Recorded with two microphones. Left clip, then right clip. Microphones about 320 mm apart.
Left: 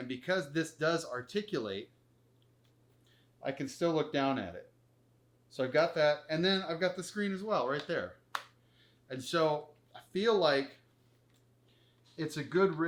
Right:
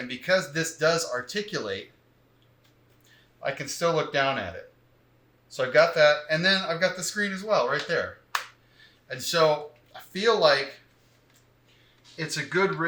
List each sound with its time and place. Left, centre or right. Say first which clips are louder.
0.1 s speech: right 9 dB; right
3.4 s speech: right 7 dB; right
12.1 s speech: right 6 dB; right